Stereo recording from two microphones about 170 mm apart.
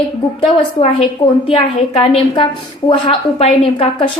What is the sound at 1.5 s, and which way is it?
A woman's voice, 30° left (ahead or behind).